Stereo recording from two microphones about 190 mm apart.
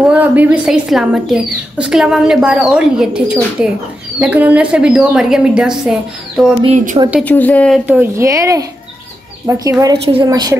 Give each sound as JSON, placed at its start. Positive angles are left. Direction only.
{"t": 0.0, "sound": "speech", "side_deg": -5}
{"t": 6.6, "sound": "speech", "side_deg": -40}
{"t": 7.2, "sound": "a woman's voice", "side_deg": 10}
{"t": 7.8, "sound": "a woman's voice", "side_deg": -10}